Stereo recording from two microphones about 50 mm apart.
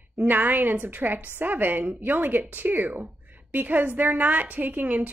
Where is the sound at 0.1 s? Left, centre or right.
Right.